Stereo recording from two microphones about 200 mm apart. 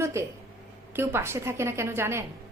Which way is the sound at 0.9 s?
10° right (ahead or behind).